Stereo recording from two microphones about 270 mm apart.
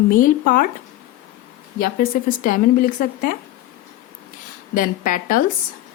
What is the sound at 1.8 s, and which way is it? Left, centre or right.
A woman's voice, left.